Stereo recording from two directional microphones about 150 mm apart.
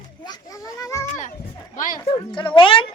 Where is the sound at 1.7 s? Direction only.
60° left (ahead or behind).